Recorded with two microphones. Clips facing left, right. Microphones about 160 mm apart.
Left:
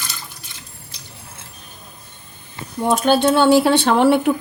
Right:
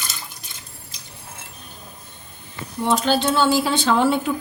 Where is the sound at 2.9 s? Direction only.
55° left (ahead or behind).